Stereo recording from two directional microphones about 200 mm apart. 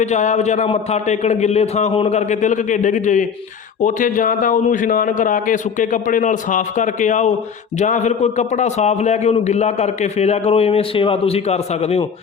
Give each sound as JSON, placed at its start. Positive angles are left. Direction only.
{"t": 0.0, "sound": "a man's voice", "side_deg": 35}